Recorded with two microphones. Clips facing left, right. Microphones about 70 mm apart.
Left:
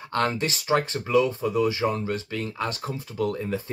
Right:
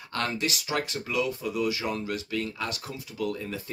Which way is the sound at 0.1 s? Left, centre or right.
Left.